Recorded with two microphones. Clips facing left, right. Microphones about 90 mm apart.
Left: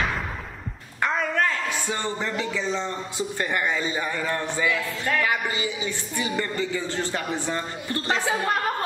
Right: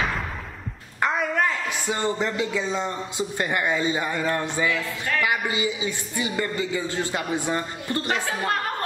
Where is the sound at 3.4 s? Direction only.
15° right (ahead or behind).